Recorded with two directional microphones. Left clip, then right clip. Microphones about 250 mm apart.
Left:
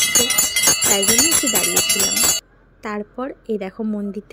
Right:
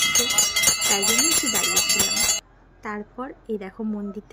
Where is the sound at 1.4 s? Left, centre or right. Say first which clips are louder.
Left 3 dB; centre.